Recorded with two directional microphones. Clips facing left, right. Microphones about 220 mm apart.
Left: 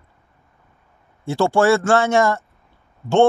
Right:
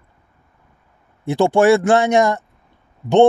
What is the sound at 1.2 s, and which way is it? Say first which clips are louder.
Speech: right 3 dB; 15° right (ahead or behind).